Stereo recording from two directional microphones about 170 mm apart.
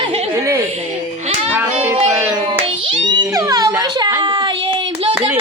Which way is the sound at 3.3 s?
20° right (ahead or behind).